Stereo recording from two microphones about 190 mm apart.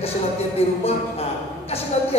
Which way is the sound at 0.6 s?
30° left (ahead or behind).